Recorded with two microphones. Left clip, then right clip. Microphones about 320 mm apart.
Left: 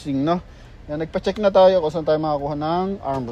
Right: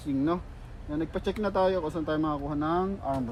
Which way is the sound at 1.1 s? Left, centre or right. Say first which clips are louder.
Left 13 dB; left.